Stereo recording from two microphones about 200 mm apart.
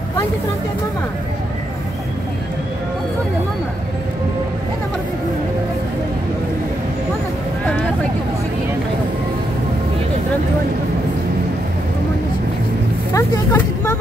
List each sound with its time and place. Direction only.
13.1 s vehicle: 10° left (ahead or behind)